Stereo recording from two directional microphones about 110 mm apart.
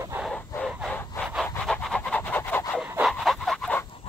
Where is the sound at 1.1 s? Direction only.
25° left (ahead or behind).